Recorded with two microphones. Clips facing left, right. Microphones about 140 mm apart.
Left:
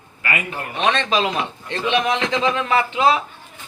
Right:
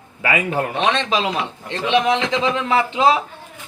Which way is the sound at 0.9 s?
20° right (ahead or behind).